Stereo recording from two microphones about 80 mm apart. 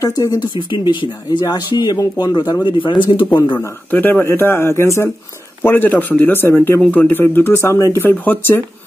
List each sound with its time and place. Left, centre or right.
0.0 s speech: left
1.4 s speech: left
3.5 s a man's voice: left
5.6 s a man's voice: left
6.8 s a man's voice: centre
8.0 s a man's voice: left